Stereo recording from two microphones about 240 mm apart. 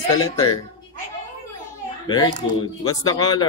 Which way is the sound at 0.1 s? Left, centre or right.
Centre.